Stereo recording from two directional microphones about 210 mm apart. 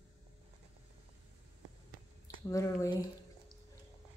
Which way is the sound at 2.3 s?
15° left (ahead or behind).